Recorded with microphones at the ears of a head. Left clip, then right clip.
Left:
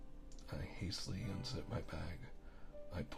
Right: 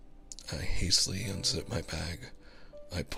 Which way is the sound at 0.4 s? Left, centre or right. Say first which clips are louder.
Right 12 dB; right.